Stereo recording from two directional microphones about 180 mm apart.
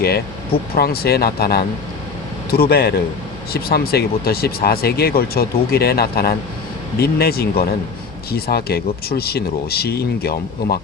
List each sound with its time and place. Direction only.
0.8 s speech: 60° left (ahead or behind)